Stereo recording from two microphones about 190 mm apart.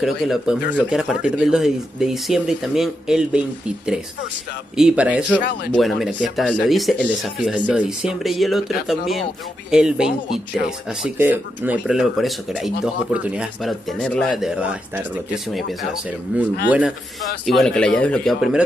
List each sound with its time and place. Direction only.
0.0 s speech: centre (ahead or behind)
5.4 s speech: 65° left (ahead or behind)
5.7 s speech: centre (ahead or behind)